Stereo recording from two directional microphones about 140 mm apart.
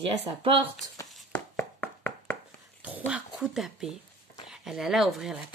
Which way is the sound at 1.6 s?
15° left (ahead or behind).